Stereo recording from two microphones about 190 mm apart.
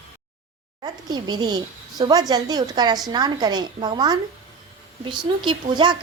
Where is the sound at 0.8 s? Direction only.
20° right (ahead or behind).